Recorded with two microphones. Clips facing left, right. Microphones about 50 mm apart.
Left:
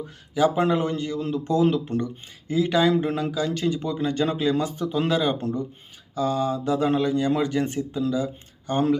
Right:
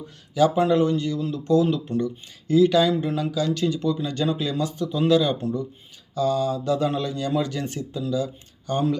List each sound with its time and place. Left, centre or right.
0.3 s speech: left
1.9 s speech: left
2.5 s speech: left
3.0 s speech: left
5.4 s speech: left
6.1 s speech: left